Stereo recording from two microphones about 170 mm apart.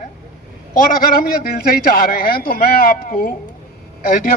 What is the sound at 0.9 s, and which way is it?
A man's voice, 65° left (ahead or behind).